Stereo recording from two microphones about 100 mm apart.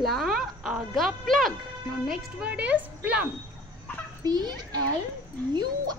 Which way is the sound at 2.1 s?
10° right (ahead or behind).